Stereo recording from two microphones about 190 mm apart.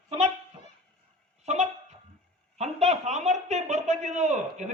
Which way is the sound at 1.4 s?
35° right (ahead or behind).